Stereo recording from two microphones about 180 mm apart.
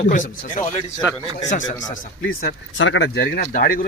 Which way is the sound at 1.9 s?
50° left (ahead or behind).